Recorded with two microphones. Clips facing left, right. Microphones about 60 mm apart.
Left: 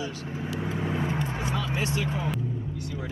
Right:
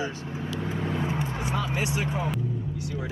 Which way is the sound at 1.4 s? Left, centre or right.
Right.